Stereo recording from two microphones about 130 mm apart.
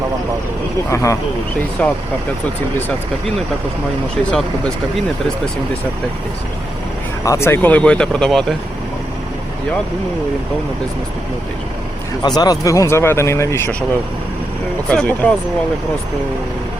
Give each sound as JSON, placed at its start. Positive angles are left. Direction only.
{"t": 0.9, "sound": "speech", "side_deg": 25}
{"t": 1.8, "sound": "speech", "side_deg": 10}
{"t": 4.3, "sound": "speech", "side_deg": 10}
{"t": 7.3, "sound": "speech", "side_deg": 20}
{"t": 12.2, "sound": "speech", "side_deg": 30}
{"t": 14.8, "sound": "speech", "side_deg": 10}